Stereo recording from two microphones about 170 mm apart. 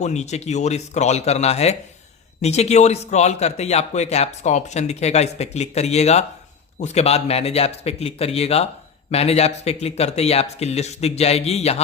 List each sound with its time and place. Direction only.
0.0 s a man's voice: 40° left (ahead or behind)